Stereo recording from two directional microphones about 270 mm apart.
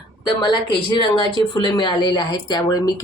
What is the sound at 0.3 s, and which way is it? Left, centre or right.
A woman's voice, centre.